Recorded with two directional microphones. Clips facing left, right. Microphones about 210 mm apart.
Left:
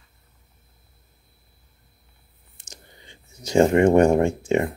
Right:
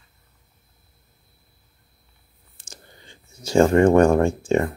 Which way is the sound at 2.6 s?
20° left (ahead or behind).